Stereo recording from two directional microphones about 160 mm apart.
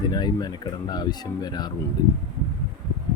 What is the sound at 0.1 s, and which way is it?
Speech, 25° left (ahead or behind).